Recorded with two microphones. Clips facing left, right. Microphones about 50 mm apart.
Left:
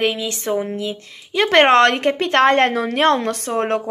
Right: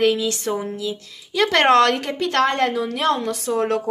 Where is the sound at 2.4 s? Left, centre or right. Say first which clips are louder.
Left 5 dB; left.